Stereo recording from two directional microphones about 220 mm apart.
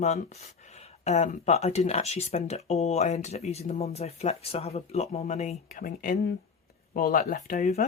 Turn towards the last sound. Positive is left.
turn(degrees=30)  # may be behind; listen again after turning